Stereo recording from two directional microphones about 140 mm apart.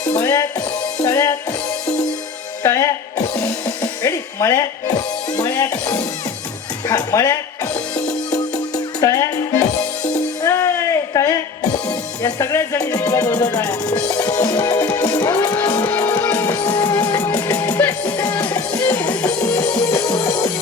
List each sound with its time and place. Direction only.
0.2 s music: 25° left (ahead or behind)
1.0 s speech: 20° left (ahead or behind)
2.6 s music: 20° left (ahead or behind)
4.0 s music: 25° left (ahead or behind)
5.5 s speech: 25° left (ahead or behind)
8.3 s music: 25° left (ahead or behind)
16.9 s music: 25° left (ahead or behind)
17.2 s music: 15° left (ahead or behind)
20.0 s music: 35° left (ahead or behind)